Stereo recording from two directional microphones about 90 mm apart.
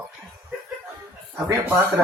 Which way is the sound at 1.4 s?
25° right (ahead or behind).